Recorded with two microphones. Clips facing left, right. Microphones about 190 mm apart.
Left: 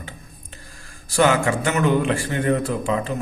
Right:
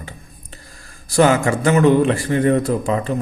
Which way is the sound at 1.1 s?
40° right (ahead or behind).